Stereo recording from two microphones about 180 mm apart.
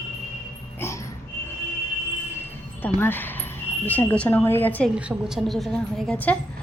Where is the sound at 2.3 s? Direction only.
10° left (ahead or behind).